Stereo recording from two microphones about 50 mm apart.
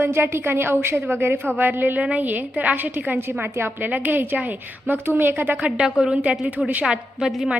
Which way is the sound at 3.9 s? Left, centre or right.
Right.